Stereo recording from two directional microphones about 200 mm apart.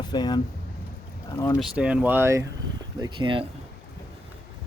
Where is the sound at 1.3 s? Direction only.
15° left (ahead or behind).